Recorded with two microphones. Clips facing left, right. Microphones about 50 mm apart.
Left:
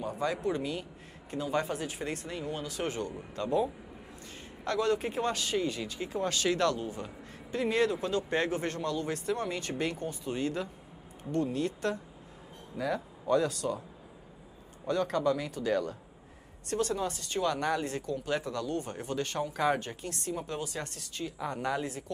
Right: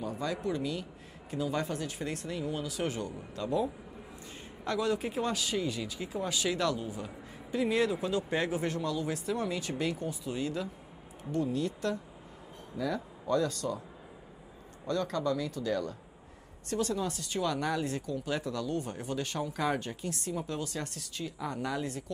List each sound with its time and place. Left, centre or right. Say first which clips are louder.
0.0 s speech: left 2 dB; centre
1.3 s speech: left 1 dB; centre
4.6 s speech: left 2 dB; centre
6.0 s speech: left 3 dB; centre
10.4 s speech: left 2 dB; centre
12.7 s speech: left 1 dB; centre
14.9 s a man's voice: left 2 dB; centre
15.6 s speech: left 2 dB; left
16.9 s speech: left 1 dB; centre